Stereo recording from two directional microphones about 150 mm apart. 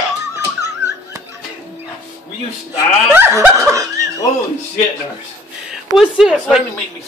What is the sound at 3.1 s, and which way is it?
Snicker, 15° right (ahead or behind).